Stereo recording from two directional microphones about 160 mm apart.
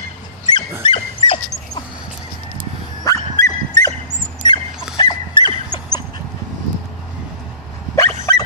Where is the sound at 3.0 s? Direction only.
20° left (ahead or behind).